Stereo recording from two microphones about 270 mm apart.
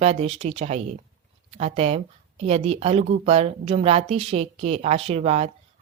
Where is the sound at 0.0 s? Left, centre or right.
Right.